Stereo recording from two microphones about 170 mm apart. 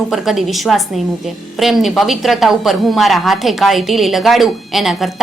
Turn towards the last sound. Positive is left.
turn(degrees=0)  # may be behind; listen again after turning